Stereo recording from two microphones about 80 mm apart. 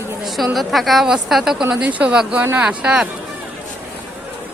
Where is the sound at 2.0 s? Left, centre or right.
Centre.